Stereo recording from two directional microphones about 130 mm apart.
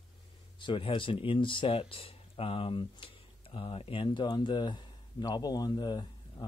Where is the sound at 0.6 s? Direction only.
40° left (ahead or behind).